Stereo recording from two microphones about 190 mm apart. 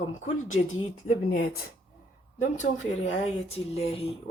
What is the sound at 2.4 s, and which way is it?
Speech, 40° left (ahead or behind).